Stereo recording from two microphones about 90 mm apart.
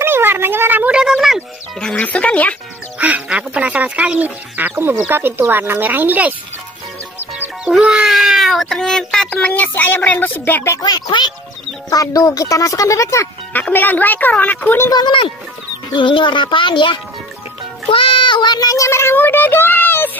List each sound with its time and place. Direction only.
0.0 s a sound: 25° right (ahead or behind)
0.9 s a sound: 10° right (ahead or behind)
1.8 s music: 15° left (ahead or behind)
3.0 s speech: 15° right (ahead or behind)
7.6 s speech: 5° right (ahead or behind); by 10.8 s 25° left (ahead or behind)
10.8 s a woman's voice: 55° left (ahead or behind)
11.9 s a child's voice: 40° left (ahead or behind)
13.5 s a woman's voice: 20° left (ahead or behind)
14.9 s a woman's voice: 55° left (ahead or behind)
17.8 s a child's voice: 80° left; by 20.1 s 20° left (ahead or behind)